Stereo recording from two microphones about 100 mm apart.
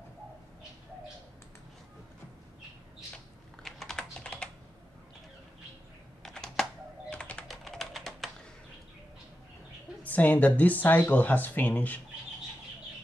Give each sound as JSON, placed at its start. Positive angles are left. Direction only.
{"t": 3.6, "sound": "computer keyboard", "side_deg": 5}
{"t": 6.2, "sound": "computer keyboard", "side_deg": 5}
{"t": 7.4, "sound": "typing", "side_deg": 0}
{"t": 10.0, "sound": "speech", "side_deg": 15}